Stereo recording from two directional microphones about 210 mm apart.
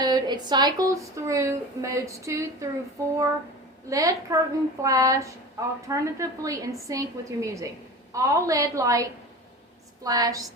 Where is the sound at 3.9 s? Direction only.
15° right (ahead or behind).